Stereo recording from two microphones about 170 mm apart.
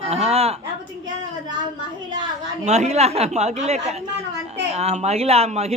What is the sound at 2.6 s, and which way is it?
A man's voice, 40° right (ahead or behind).